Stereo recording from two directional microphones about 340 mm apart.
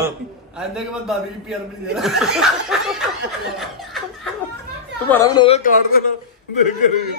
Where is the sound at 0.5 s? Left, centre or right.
Centre.